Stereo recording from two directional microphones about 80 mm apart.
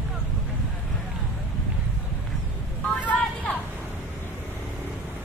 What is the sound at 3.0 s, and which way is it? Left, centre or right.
Vehicle, centre.